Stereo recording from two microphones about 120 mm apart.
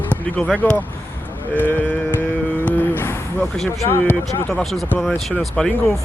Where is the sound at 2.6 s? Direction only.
15° left (ahead or behind).